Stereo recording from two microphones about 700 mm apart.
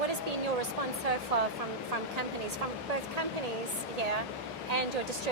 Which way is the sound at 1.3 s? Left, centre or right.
Right.